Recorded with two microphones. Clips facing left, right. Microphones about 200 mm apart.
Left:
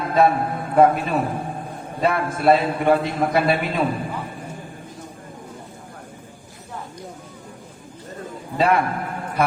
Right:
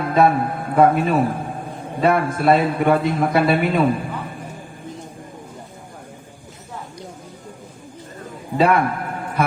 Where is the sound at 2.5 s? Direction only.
50° right (ahead or behind).